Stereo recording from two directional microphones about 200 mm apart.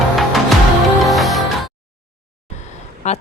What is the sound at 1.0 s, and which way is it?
Music, centre (ahead or behind).